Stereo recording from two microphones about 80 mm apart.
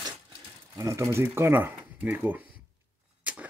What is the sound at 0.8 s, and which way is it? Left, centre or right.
Speech, right.